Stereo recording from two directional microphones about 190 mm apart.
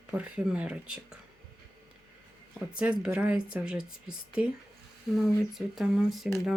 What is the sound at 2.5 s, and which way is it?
Speech, 5° right (ahead or behind).